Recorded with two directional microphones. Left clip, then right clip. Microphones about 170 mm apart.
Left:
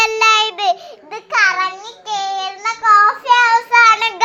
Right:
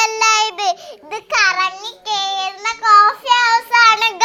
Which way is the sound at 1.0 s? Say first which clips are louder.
Left 1 dB; 55° right (ahead or behind).